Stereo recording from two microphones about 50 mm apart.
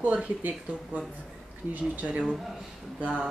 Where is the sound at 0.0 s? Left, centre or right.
Right.